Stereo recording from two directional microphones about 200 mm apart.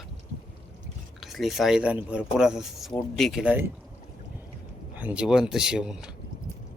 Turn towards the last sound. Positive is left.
turn(degrees=-5)  # may be behind; listen again after turning